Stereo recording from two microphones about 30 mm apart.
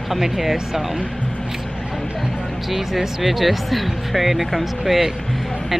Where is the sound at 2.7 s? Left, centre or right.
Centre.